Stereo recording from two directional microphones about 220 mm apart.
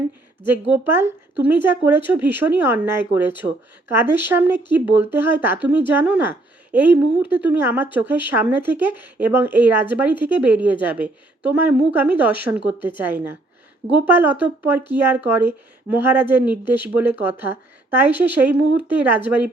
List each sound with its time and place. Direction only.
0.7 s speech: 10° right (ahead or behind)